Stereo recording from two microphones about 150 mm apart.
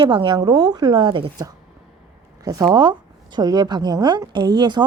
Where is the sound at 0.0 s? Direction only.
30° right (ahead or behind).